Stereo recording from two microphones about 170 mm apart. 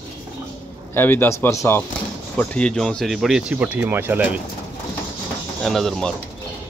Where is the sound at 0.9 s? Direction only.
10° left (ahead or behind); by 4.3 s 10° right (ahead or behind).